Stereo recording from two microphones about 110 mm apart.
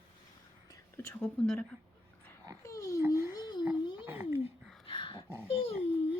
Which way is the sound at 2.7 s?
30° left (ahead or behind).